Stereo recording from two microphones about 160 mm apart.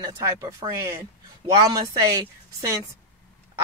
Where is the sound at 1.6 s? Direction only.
25° right (ahead or behind).